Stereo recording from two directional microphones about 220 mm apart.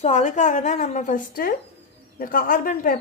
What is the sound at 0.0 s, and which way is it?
A woman's voice, 30° left (ahead or behind).